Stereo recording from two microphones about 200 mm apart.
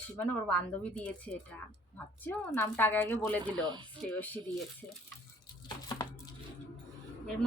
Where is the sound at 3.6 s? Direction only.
20° right (ahead or behind).